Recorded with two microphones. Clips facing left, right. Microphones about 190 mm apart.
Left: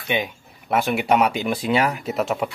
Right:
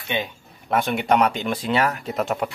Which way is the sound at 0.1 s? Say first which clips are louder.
Left 2 dB; 10° left (ahead or behind).